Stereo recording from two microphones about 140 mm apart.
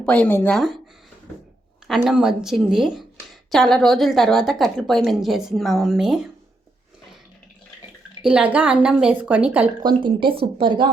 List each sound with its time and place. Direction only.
0.0 s speech: 10° left (ahead or behind)
0.5 s a woman's voice: centre (ahead or behind)
1.9 s a woman's voice: 5° right (ahead or behind)
8.2 s speech: 10° right (ahead or behind)
9.8 s speech: 35° right (ahead or behind)